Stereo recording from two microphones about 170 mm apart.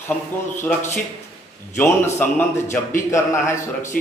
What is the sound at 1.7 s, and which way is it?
A man's voice, 15° left (ahead or behind).